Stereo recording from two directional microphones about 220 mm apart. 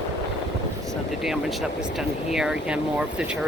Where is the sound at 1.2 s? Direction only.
Centre (ahead or behind).